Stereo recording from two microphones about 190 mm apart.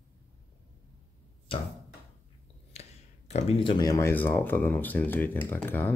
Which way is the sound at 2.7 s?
35° left (ahead or behind).